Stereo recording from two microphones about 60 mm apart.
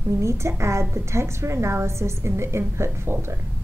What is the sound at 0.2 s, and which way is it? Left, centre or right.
A woman's voice, right.